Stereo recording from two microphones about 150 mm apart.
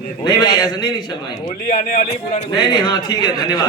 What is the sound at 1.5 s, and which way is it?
Speech, 65° left (ahead or behind).